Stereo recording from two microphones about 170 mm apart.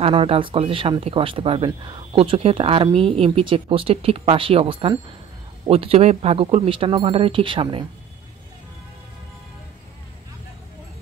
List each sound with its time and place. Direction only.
0.0 s speech: 35° right (ahead or behind)